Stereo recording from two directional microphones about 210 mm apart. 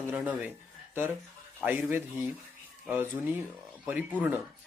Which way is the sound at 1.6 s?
10° right (ahead or behind).